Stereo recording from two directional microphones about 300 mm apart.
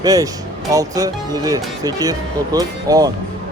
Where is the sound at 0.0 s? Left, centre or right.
Centre.